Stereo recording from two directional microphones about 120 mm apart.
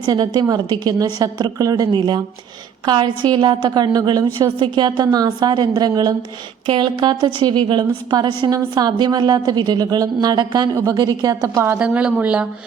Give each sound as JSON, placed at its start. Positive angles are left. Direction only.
{"t": 0.0, "sound": "a woman's voice", "side_deg": -35}
{"t": 11.7, "sound": "speech", "side_deg": -10}